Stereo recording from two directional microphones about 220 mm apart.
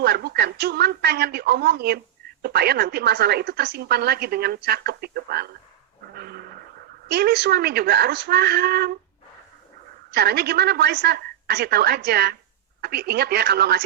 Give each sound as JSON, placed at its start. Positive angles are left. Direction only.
{"t": 0.0, "sound": "a woman's voice", "side_deg": -45}
{"t": 6.1, "sound": "a sound", "side_deg": -45}
{"t": 7.1, "sound": "a woman's voice", "side_deg": -45}
{"t": 10.1, "sound": "a woman's voice", "side_deg": -45}